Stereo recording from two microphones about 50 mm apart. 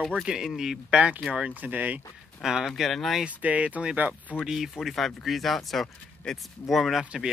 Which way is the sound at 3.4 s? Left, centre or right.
Right.